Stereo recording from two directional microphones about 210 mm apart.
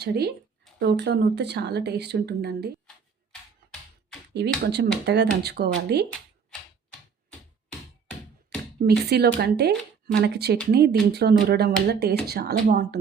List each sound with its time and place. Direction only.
0.0 s speech: 50° right (ahead or behind)
4.4 s speech: 55° right (ahead or behind)
8.4 s speech: 50° right (ahead or behind)